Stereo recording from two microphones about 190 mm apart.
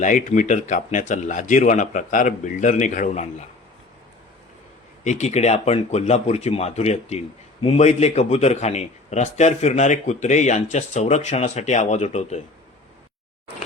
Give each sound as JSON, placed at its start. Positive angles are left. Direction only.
{"t": 0.0, "sound": "speech", "side_deg": 40}
{"t": 5.0, "sound": "speech", "side_deg": 35}